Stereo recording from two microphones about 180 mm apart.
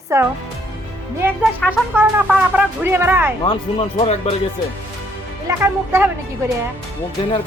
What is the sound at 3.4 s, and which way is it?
Speech, 30° left (ahead or behind).